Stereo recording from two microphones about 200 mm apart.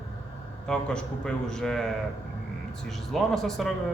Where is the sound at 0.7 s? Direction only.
5° left (ahead or behind).